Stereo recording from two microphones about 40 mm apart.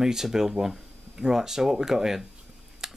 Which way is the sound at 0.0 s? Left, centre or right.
Centre.